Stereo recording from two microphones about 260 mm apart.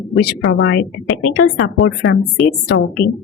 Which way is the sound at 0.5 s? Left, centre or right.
Left.